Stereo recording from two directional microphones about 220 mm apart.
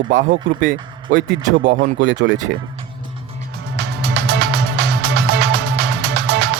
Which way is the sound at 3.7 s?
50° right (ahead or behind).